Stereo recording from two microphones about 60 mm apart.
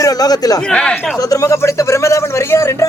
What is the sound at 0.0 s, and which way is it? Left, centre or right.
Speech, left.